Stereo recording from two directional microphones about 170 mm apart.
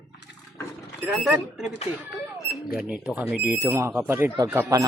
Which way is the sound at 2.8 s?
5° right (ahead or behind).